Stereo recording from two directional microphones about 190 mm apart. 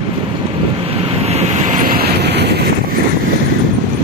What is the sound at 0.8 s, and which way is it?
Vehicle, 30° right (ahead or behind).